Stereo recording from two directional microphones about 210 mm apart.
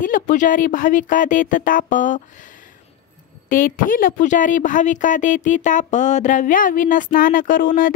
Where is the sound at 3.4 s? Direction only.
40° left (ahead or behind).